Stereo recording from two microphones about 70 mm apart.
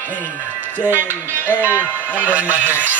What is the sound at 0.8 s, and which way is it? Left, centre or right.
Speech, right.